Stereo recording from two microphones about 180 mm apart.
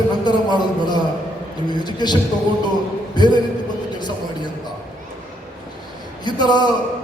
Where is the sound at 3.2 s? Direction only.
25° left (ahead or behind).